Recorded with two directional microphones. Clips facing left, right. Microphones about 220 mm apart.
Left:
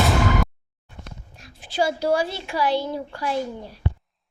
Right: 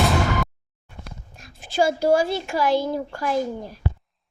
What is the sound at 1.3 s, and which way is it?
Speech, 45° right (ahead or behind).